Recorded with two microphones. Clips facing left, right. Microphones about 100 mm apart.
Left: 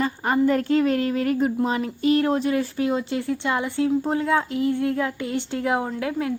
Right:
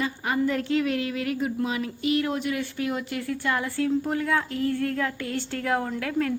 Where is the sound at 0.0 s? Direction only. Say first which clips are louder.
Left 5 dB; 45° left (ahead or behind).